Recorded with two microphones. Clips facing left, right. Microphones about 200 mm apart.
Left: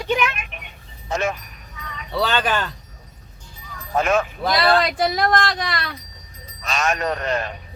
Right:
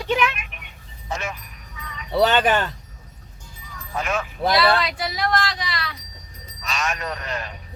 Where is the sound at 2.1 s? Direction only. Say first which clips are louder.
Right 4 dB; 20° right (ahead or behind).